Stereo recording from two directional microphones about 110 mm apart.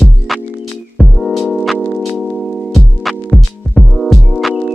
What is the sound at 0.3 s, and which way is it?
Music, centre (ahead or behind).